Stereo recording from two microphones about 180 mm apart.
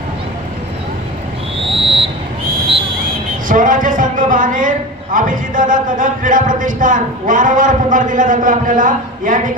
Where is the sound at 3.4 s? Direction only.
50° right (ahead or behind).